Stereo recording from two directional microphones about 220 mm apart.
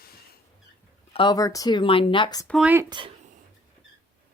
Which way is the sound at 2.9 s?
20° right (ahead or behind).